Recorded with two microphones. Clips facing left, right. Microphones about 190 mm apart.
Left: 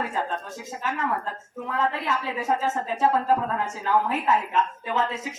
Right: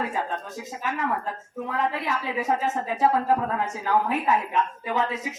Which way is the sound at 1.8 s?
15° right (ahead or behind).